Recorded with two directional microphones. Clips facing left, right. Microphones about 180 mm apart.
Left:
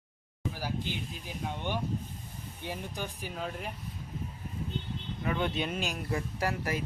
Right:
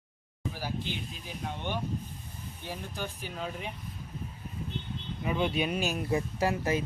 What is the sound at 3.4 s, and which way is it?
Speech, centre (ahead or behind).